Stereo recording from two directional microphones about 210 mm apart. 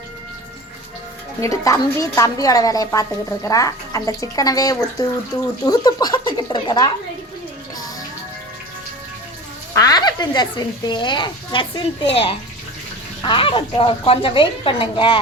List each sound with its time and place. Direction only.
1.4 s a woman's voice: 15° left (ahead or behind)
9.7 s speech: 15° left (ahead or behind)